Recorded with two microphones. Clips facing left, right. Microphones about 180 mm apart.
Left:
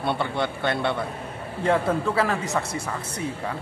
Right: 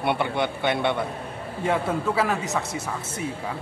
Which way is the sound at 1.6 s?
5° right (ahead or behind).